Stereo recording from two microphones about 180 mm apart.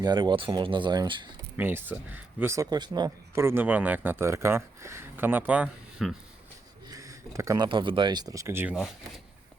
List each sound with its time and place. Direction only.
0.0 s speech: 25° right (ahead or behind)
1.5 s speech: 10° right (ahead or behind)
6.8 s speech: 20° right (ahead or behind); by 9.2 s centre (ahead or behind)